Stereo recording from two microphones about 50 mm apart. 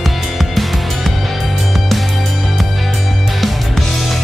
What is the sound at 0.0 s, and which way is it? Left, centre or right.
Music, centre.